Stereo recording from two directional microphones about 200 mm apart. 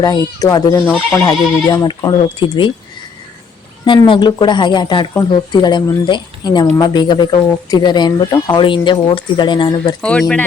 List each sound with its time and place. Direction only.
0.0 s speech: 20° left (ahead or behind)
3.8 s speech: 25° left (ahead or behind)
10.0 s speech: 5° left (ahead or behind)